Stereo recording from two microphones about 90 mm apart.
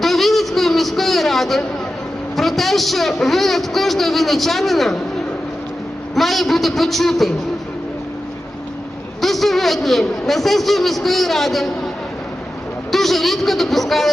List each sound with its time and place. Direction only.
0.0 s a sound: centre (ahead or behind)
2.3 s a man's voice: centre (ahead or behind)
6.1 s a man's voice: centre (ahead or behind)
9.2 s a man's voice: centre (ahead or behind)
12.9 s a man's voice: centre (ahead or behind)